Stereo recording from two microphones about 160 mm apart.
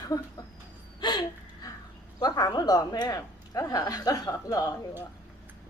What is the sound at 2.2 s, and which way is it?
A woman's voice, 25° left (ahead or behind).